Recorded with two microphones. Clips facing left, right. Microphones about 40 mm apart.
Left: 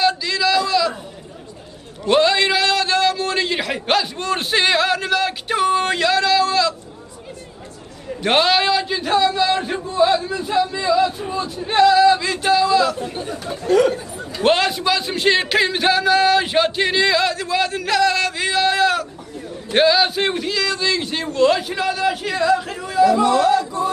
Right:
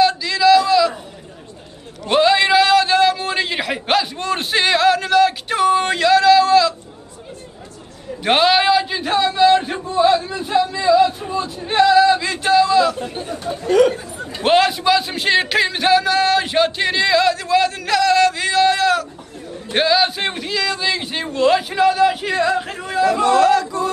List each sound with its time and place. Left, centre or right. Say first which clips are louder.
0.0 s a sound: right 4 dB; centre
2.0 s a sound: right 1 dB; centre
8.2 s a man's voice: right 2 dB; centre
14.4 s a man's voice: right 2 dB; centre
22.8 s chatter: left 3 dB; right
23.2 s a man's voice: right 2 dB; right